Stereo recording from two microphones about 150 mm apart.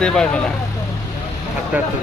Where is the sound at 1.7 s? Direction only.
10° right (ahead or behind).